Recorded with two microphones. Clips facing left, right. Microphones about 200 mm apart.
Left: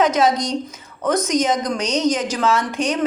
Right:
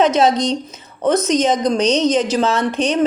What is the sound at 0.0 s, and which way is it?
A woman's voice, 25° right (ahead or behind).